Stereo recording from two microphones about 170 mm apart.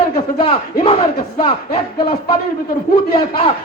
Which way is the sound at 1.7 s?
30° left (ahead or behind).